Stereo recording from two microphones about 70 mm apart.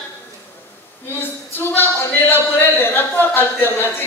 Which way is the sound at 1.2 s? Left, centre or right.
Left.